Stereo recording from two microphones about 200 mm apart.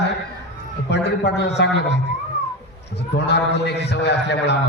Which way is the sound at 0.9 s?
60° left (ahead or behind).